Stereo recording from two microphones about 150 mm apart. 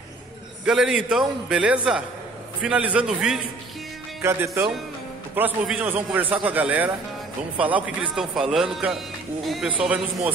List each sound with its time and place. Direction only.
0.7 s a man's voice: 5° right (ahead or behind)
4.2 s a man's voice: 20° right (ahead or behind); by 9.8 s 5° right (ahead or behind)